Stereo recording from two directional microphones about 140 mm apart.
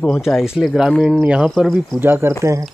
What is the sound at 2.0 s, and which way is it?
Speech, 15° right (ahead or behind).